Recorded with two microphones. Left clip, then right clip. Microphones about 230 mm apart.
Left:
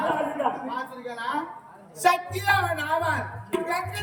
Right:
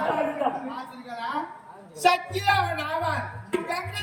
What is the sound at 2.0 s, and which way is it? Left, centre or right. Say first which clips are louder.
Speech: even; centre.